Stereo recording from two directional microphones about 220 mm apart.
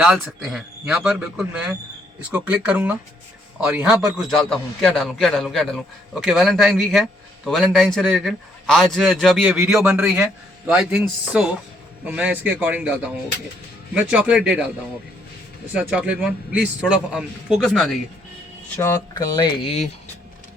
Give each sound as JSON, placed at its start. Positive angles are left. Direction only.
{"t": 0.0, "sound": "a man's voice", "side_deg": -5}
{"t": 15.7, "sound": "a man's voice", "side_deg": -5}
{"t": 18.8, "sound": "speech", "side_deg": 15}